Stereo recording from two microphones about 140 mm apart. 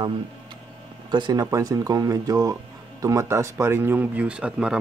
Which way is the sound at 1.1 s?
30° right (ahead or behind).